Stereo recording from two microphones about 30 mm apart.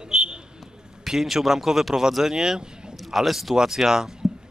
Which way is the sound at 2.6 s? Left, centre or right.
Right.